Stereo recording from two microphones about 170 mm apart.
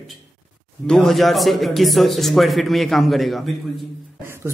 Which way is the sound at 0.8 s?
Centre (ahead or behind).